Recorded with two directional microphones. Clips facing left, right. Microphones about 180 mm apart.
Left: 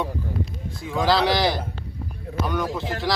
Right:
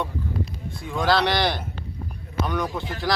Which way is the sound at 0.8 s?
Centre (ahead or behind).